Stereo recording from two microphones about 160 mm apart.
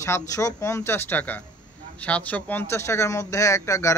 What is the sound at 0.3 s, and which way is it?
A man's voice, 20° left (ahead or behind).